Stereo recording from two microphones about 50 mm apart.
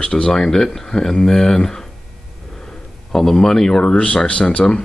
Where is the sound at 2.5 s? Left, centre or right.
Centre.